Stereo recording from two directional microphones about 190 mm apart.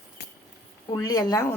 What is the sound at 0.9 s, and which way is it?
Speech, 20° left (ahead or behind).